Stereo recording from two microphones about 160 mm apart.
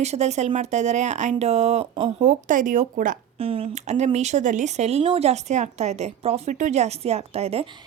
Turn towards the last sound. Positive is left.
turn(degrees=-40)  # may be behind; listen again after turning